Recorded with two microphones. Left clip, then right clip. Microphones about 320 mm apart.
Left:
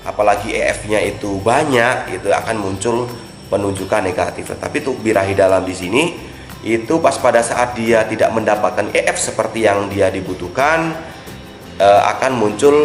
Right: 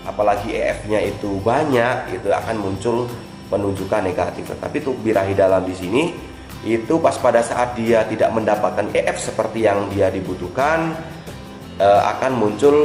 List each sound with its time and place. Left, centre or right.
0.2 s a man's voice: centre